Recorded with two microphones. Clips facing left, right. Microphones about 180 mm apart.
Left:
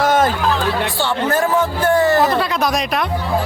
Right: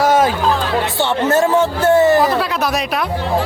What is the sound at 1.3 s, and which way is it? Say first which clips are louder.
Speech: right 4 dB; 25° right (ahead or behind).